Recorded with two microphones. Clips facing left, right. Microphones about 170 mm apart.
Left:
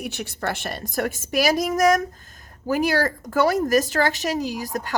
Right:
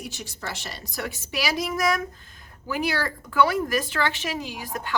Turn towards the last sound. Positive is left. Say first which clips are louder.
# left 6 dB
turn(degrees=40)  # may be behind; listen again after turning